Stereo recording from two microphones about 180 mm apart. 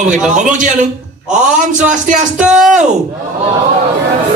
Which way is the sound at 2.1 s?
45° right (ahead or behind).